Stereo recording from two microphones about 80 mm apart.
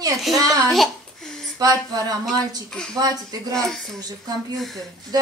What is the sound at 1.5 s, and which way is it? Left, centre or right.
Speech, right.